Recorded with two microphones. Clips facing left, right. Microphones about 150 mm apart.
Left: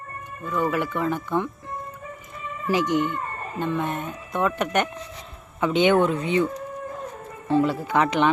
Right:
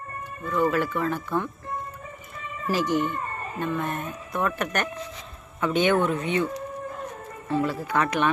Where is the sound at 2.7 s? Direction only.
20° left (ahead or behind).